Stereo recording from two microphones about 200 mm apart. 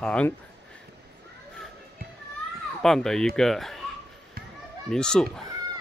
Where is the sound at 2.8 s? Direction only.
Centre (ahead or behind).